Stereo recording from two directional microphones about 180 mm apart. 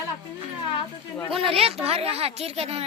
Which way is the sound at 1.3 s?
30° right (ahead or behind).